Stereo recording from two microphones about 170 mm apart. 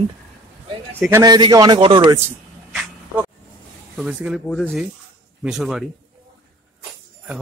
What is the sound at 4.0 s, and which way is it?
Speech, 5° right (ahead or behind).